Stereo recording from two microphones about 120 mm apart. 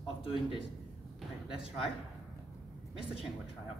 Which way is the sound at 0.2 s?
45° left (ahead or behind).